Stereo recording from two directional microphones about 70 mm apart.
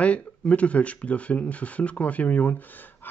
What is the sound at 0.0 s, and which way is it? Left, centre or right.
A man's voice, centre.